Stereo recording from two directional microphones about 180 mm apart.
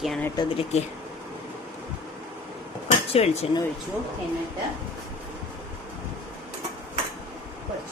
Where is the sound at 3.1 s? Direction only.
35° left (ahead or behind).